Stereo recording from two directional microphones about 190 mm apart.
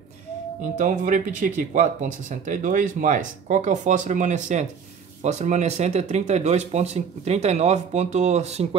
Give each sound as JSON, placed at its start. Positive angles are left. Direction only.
{"t": 0.6, "sound": "speech", "side_deg": -40}